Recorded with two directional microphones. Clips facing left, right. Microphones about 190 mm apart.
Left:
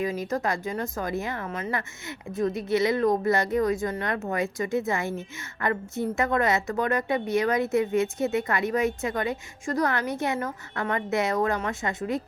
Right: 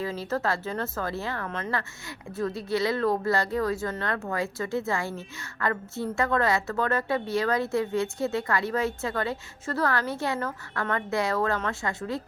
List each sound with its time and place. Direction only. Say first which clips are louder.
0.0 s a woman's voice: left 2 dB; 15° left (ahead or behind)